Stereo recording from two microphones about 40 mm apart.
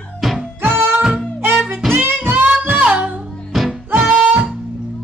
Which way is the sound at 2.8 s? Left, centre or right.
Right.